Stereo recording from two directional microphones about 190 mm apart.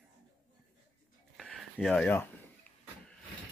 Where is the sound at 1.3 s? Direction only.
Centre (ahead or behind).